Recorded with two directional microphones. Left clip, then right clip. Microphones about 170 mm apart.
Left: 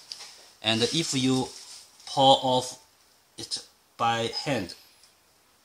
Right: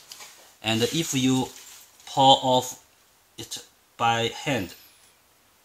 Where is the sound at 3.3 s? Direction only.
30° left (ahead or behind).